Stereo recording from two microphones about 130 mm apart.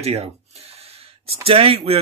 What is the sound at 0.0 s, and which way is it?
Speech, 50° right (ahead or behind).